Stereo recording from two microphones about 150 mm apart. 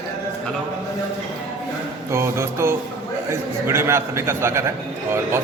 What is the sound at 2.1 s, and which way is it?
A man's voice, 15° right (ahead or behind).